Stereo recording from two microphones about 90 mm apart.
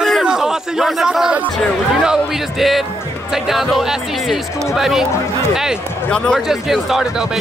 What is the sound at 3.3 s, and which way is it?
A man's voice, 5° right (ahead or behind).